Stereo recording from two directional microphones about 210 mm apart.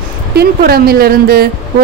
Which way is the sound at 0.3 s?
50° right (ahead or behind).